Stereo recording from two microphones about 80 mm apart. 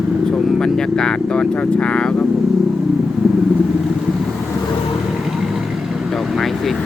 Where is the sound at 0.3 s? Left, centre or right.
Centre.